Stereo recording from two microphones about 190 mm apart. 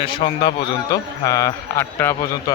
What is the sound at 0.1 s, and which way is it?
A man's voice, 25° left (ahead or behind).